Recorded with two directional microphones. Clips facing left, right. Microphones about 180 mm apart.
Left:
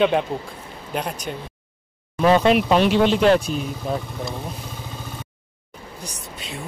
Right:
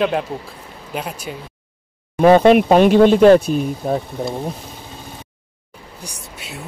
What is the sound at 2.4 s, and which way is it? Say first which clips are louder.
Speech: right 6 dB; 50° right (ahead or behind).